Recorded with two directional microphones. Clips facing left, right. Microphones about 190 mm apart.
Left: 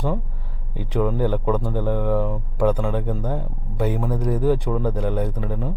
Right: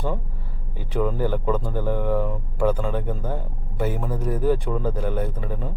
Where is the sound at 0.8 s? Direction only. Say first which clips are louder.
Left 2 dB; 15° left (ahead or behind).